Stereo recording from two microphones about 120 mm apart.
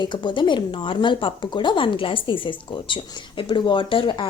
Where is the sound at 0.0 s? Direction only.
40° left (ahead or behind).